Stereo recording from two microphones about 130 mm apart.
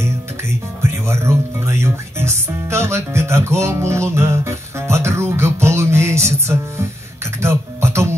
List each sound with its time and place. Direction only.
1.0 s music: 20° right (ahead or behind)